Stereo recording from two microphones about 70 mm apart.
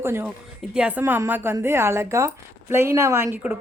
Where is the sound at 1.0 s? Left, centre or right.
Right.